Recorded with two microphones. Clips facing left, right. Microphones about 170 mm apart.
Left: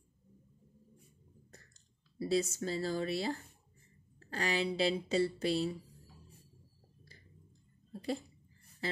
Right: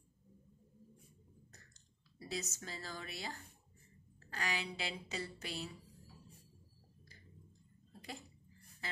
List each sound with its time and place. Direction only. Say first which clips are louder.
2.1 s speech: left 12 dB; 30° left (ahead or behind)